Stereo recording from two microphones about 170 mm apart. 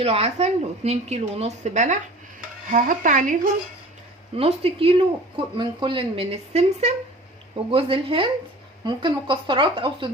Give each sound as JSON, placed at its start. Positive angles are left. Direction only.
{"t": 0.0, "sound": "speech", "side_deg": -35}
{"t": 4.4, "sound": "speech", "side_deg": -35}